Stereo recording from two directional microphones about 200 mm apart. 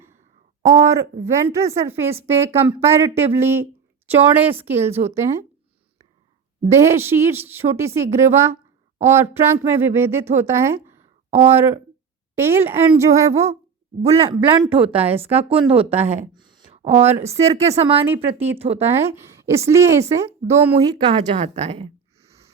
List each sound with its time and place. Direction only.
0.6 s a woman's voice: 15° right (ahead or behind)
6.7 s a woman's voice: 15° right (ahead or behind)
12.4 s a woman's voice: 10° right (ahead or behind)
14.0 s a man's voice: 30° right (ahead or behind)
18.0 s a woman's voice: 10° right (ahead or behind)
18.5 s a man's voice: 30° right (ahead or behind)
18.9 s a woman's voice: 10° right (ahead or behind); by 22.3 s 30° right (ahead or behind)